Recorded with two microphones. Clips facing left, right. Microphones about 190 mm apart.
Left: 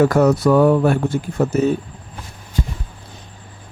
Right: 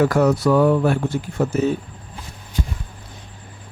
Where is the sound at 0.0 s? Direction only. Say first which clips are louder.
Left 3 dB; 40° left (ahead or behind).